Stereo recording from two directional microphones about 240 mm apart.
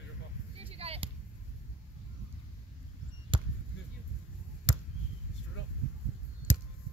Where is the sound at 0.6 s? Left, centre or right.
Right.